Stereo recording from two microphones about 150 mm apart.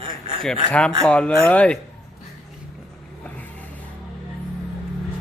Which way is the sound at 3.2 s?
10° left (ahead or behind).